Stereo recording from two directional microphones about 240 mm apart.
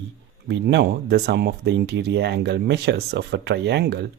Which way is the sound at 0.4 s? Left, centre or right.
Right.